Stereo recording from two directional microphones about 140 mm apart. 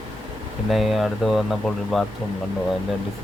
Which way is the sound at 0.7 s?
Centre (ahead or behind).